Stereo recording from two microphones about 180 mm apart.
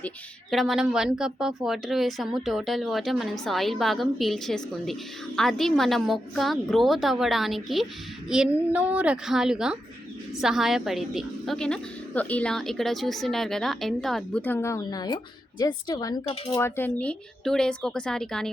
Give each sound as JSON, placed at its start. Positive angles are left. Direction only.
{"t": 0.5, "sound": "a woman's voice", "side_deg": 0}
{"t": 16.2, "sound": "speech", "side_deg": 30}
{"t": 16.6, "sound": "a woman's voice", "side_deg": 15}